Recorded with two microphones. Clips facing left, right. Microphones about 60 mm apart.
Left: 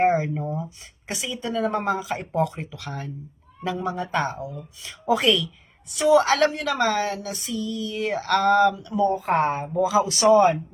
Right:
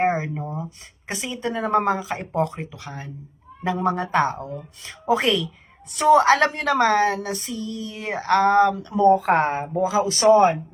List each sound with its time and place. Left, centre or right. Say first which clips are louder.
0.0 s a woman's voice: left 2 dB; right
3.8 s speech: right 7 dB; right
4.1 s a woman's voice: right 4 dB; right
4.4 s speech: right 1 dB; right
5.0 s a woman's voice: even; right
5.9 s a woman's voice: right 3 dB; right
9.0 s speech: right 7 dB; right
9.4 s a woman's voice: even; right